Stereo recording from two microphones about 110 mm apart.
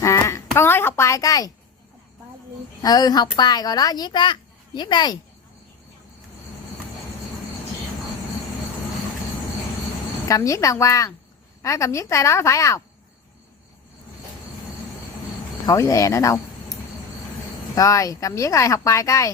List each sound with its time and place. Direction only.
0.0 s a sound: 30° left (ahead or behind)
2.8 s a child's voice: 35° left (ahead or behind)
10.2 s speech: 30° left (ahead or behind)
15.6 s speech: 30° left (ahead or behind)
17.7 s speech: 30° left (ahead or behind)